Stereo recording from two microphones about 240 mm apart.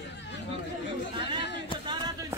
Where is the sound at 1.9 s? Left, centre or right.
Centre.